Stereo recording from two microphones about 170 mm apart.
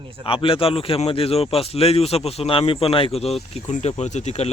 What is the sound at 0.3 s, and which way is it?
Speech, 35° left (ahead or behind).